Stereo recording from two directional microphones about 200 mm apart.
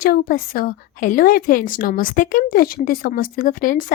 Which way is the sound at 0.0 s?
45° left (ahead or behind).